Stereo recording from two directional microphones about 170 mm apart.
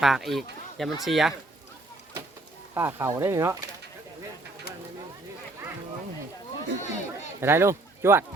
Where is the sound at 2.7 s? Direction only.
15° right (ahead or behind).